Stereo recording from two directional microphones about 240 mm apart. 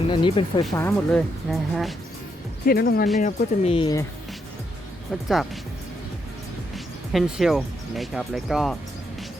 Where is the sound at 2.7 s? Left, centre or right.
Left; by 4.0 s centre.